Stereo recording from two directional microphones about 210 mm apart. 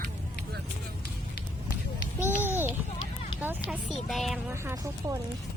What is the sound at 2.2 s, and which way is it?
Speech, 10° right (ahead or behind).